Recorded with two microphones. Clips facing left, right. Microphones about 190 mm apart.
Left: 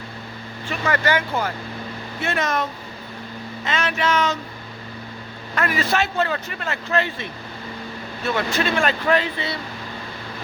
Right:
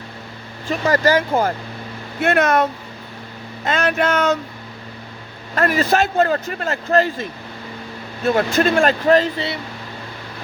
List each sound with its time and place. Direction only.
0.7 s speech: 40° right (ahead or behind)
2.2 s speech: 60° right (ahead or behind)
3.6 s speech: 50° right (ahead or behind)
5.5 s speech: 45° right (ahead or behind)